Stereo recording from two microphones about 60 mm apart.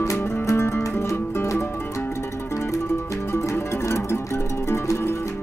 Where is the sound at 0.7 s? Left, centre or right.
Left.